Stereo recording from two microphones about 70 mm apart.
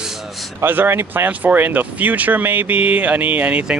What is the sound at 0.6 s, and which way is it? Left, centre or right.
Speech, right.